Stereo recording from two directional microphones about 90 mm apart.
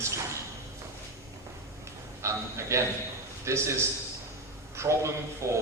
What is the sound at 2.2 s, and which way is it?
A man's voice, 35° right (ahead or behind).